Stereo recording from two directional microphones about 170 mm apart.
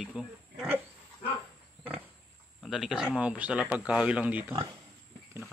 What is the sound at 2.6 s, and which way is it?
Speech, centre (ahead or behind).